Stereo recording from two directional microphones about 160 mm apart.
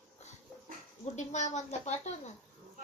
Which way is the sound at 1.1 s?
45° left (ahead or behind).